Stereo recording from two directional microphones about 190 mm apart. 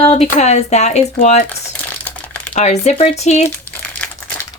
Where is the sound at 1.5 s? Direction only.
10° left (ahead or behind).